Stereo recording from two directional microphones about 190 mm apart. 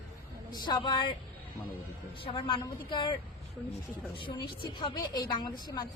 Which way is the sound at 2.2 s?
25° left (ahead or behind).